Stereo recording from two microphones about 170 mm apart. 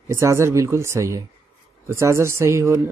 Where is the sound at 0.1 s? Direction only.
15° right (ahead or behind).